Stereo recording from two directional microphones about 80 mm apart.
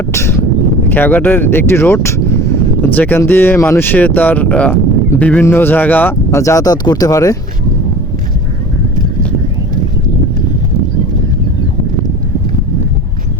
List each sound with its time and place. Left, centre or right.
0.1 s speech: left
2.8 s speech: left
6.3 s speech: left